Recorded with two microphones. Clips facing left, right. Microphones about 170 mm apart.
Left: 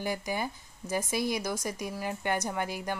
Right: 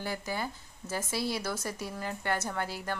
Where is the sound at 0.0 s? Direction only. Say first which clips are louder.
Left 3 dB; 15° left (ahead or behind).